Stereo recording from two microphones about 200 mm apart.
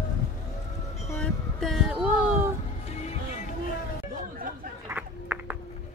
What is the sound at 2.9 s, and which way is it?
Music, 35° left (ahead or behind).